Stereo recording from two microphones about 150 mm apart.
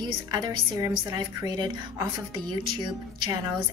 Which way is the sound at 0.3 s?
25° right (ahead or behind).